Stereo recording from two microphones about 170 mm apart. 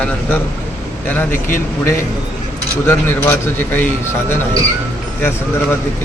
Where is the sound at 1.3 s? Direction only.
50° left (ahead or behind).